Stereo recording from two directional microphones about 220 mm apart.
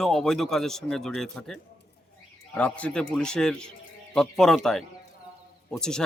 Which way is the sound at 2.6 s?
5° left (ahead or behind).